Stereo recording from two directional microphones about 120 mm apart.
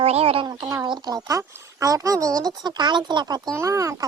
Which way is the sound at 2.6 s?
40° right (ahead or behind).